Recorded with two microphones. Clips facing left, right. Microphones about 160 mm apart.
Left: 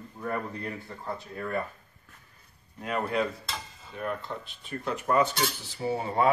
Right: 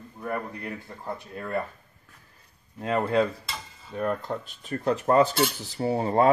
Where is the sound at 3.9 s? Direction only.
45° right (ahead or behind).